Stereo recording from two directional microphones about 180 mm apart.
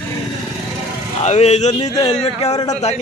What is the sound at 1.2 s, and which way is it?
A man's voice, 40° left (ahead or behind).